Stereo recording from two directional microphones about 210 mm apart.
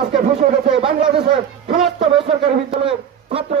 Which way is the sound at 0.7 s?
25° right (ahead or behind).